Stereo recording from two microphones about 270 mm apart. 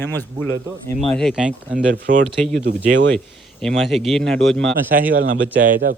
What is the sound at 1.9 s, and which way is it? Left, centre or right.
Speech, right.